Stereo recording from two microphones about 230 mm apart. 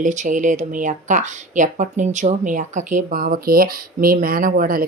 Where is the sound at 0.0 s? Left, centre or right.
Right.